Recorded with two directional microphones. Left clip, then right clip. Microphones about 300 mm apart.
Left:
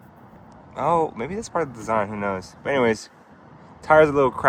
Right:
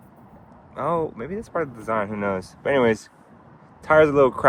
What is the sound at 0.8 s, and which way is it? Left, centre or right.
Speech, centre.